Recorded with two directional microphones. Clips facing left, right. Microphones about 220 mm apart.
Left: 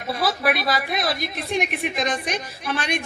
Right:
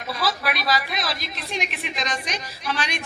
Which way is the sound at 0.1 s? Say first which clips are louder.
Left 4 dB; 55° left (ahead or behind).